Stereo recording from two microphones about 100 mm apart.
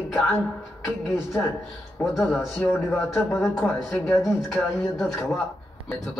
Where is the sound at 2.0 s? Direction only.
20° left (ahead or behind).